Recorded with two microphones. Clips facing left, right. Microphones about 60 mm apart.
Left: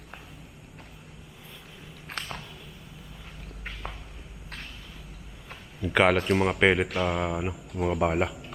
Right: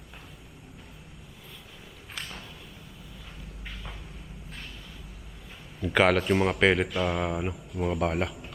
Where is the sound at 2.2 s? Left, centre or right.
Left.